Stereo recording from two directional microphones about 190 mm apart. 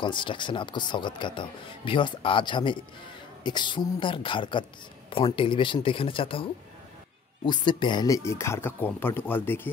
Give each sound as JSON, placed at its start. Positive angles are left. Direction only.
{"t": 0.0, "sound": "speech", "side_deg": 25}